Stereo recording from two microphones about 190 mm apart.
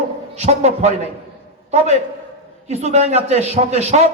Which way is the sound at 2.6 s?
35° right (ahead or behind).